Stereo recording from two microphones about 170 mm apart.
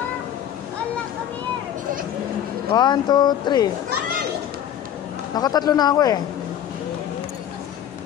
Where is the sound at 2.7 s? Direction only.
25° left (ahead or behind).